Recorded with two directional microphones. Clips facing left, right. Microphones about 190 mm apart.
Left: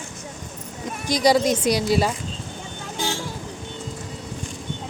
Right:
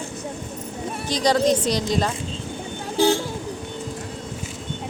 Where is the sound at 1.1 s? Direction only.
10° left (ahead or behind).